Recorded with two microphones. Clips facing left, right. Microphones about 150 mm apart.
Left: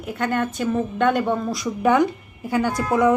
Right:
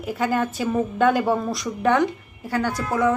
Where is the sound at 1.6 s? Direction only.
10° left (ahead or behind).